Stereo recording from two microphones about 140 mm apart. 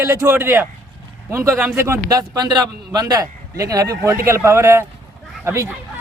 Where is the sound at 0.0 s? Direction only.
20° right (ahead or behind).